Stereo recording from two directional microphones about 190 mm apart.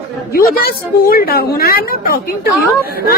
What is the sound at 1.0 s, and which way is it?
A woman's voice, 55° left (ahead or behind).